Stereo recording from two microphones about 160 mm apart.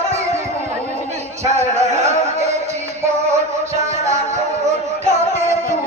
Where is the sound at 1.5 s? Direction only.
45° right (ahead or behind).